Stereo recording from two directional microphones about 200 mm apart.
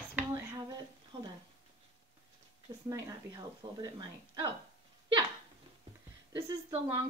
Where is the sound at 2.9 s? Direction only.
20° right (ahead or behind).